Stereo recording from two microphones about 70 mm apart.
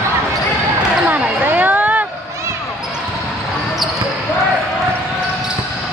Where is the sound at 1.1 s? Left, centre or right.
Right.